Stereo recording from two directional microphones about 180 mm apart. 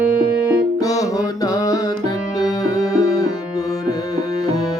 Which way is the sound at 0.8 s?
20° left (ahead or behind).